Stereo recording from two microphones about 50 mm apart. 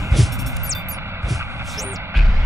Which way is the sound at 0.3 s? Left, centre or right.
Right.